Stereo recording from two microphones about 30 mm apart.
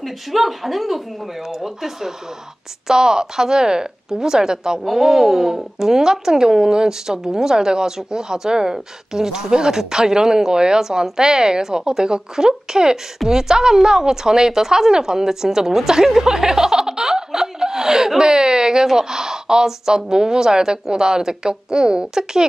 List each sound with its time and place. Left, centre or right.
0.0 s speech: centre
2.9 s speech: right